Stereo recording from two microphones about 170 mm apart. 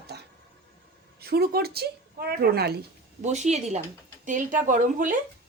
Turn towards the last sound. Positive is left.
turn(degrees=-50)  # may be behind; listen again after turning